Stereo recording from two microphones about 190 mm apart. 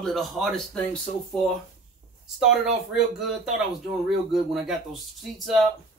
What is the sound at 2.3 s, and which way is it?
Speech, 5° right (ahead or behind).